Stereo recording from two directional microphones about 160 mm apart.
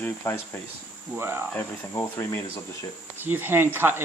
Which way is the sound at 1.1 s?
15° right (ahead or behind).